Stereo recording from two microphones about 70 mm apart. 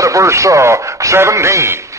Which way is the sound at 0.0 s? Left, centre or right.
Right.